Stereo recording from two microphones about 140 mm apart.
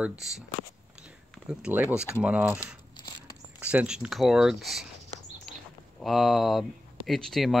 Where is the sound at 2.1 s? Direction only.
10° right (ahead or behind).